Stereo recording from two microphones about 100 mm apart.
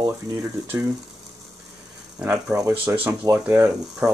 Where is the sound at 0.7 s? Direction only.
30° right (ahead or behind).